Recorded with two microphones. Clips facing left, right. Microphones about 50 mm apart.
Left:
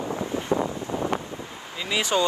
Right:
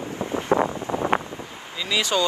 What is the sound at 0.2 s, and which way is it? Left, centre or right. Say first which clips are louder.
Wind noise: right 6 dB; right.